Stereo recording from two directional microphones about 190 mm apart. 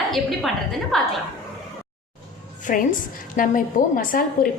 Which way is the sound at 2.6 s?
45° left (ahead or behind).